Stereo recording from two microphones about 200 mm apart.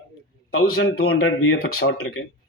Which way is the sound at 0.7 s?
75° left (ahead or behind).